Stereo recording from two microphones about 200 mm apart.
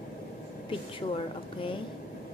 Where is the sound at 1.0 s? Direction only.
25° left (ahead or behind).